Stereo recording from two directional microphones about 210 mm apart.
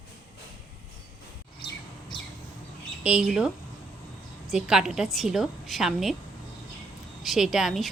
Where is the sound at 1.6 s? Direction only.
25° left (ahead or behind).